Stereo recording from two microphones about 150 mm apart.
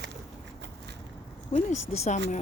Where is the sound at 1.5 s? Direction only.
50° left (ahead or behind).